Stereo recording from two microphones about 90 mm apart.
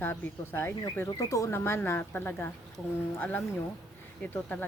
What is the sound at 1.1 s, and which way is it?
Speech, 35° left (ahead or behind).